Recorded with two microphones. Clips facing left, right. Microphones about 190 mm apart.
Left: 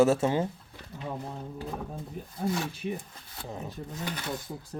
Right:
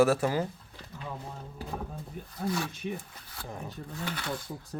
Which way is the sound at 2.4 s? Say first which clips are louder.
Left 1 dB; 25° left (ahead or behind).